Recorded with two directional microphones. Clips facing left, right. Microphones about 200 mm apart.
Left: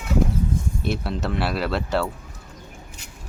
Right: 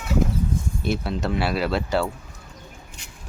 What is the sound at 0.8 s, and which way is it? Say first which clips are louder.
Speech: right 2 dB; centre (ahead or behind).